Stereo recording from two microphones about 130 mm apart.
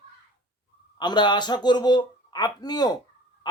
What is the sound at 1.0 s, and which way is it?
Speech, 35° left (ahead or behind).